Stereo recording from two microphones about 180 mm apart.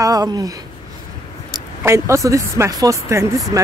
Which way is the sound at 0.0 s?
20° right (ahead or behind).